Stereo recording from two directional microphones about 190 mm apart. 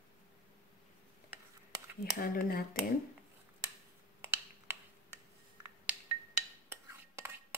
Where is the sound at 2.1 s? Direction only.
55° left (ahead or behind).